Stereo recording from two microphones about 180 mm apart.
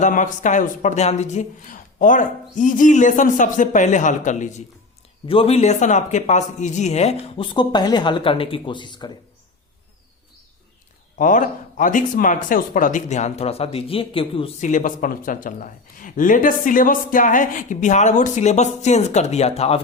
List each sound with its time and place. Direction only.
0.0 s speech: 45° left (ahead or behind)
5.2 s a man's voice: 30° left (ahead or behind)
11.2 s speech: 45° left (ahead or behind)